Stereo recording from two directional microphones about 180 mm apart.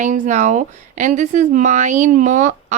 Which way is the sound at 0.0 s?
45° right (ahead or behind).